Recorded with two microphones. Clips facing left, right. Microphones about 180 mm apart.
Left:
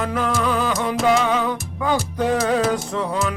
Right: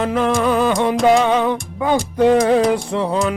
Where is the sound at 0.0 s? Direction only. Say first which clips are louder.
Right 5 dB; 25° right (ahead or behind).